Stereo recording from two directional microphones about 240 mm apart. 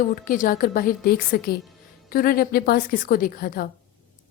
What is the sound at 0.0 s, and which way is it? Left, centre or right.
A woman's voice, left.